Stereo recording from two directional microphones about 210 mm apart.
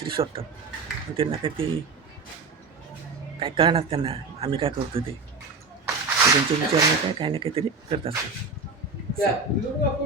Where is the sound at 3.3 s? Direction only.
25° right (ahead or behind).